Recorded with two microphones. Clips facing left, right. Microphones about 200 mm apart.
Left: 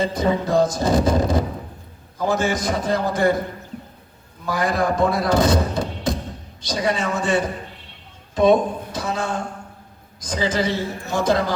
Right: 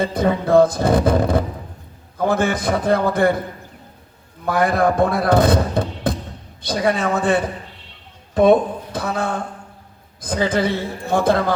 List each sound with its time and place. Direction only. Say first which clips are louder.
0.0 s speech: right 1 dB; 55° right (ahead or behind)
4.4 s speech: right 4 dB; 55° right (ahead or behind)